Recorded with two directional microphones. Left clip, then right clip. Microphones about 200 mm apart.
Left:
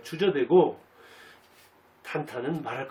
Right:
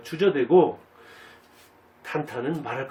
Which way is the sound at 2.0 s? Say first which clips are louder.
Right 3 dB; 10° left (ahead or behind).